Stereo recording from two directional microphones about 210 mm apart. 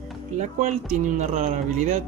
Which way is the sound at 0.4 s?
35° right (ahead or behind).